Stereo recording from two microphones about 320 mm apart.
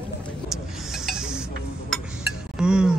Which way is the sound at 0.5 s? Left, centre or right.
Centre.